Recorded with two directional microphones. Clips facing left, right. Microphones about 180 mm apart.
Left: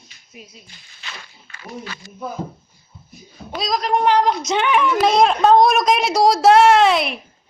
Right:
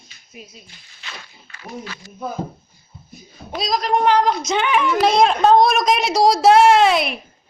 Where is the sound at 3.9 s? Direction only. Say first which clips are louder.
Even; 15° left (ahead or behind).